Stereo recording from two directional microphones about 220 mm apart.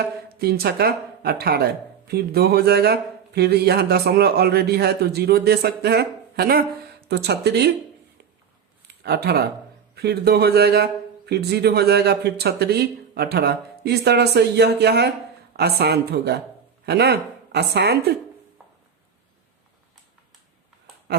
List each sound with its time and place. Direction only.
0.3 s a man's voice: 45° right (ahead or behind)
9.0 s a man's voice: 45° right (ahead or behind)